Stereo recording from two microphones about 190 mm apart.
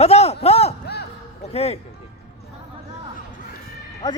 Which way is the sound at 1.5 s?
35° left (ahead or behind).